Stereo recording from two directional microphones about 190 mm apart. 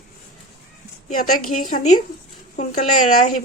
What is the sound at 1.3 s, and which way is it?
A woman's voice, 45° left (ahead or behind).